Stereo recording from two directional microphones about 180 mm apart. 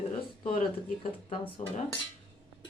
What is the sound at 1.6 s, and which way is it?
Speech, 40° left (ahead or behind).